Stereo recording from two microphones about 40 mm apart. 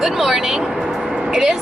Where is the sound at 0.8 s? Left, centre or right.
Centre.